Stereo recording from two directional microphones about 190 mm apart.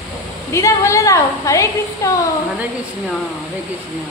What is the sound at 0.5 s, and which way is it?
A woman's voice, 15° left (ahead or behind).